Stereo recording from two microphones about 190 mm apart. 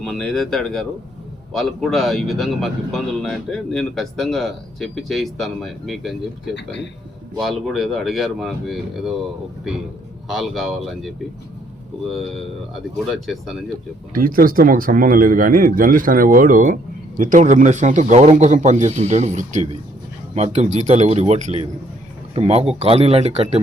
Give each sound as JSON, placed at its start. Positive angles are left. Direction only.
{"t": 0.0, "sound": "speech", "side_deg": 0}
{"t": 10.2, "sound": "speech", "side_deg": 0}
{"t": 13.1, "sound": "speech", "side_deg": 0}
{"t": 14.1, "sound": "a man's voice", "side_deg": -45}